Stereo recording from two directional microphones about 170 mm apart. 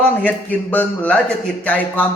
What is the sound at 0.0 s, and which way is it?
A man's voice, 10° left (ahead or behind).